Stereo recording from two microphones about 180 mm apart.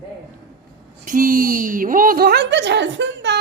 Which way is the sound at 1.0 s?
50° right (ahead or behind).